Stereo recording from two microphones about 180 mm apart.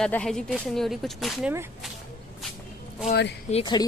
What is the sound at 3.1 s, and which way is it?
Speech, 70° left (ahead or behind).